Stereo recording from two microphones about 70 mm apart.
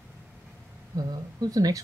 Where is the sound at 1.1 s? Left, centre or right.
Right.